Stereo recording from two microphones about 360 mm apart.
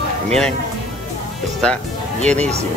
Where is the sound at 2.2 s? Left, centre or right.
Centre.